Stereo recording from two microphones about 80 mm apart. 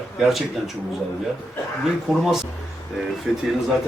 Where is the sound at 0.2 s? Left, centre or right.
Centre.